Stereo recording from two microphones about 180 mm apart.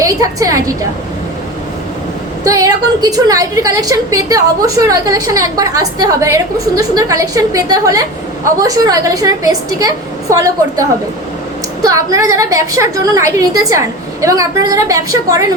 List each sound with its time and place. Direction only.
0.0 s a woman's voice: 20° right (ahead or behind)
2.4 s a woman's voice: 20° right (ahead or behind)